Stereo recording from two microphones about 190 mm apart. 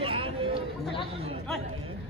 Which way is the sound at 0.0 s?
25° right (ahead or behind).